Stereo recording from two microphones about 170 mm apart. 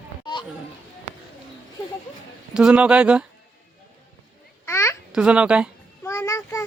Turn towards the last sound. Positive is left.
turn(degrees=20)  # may be behind; listen again after turning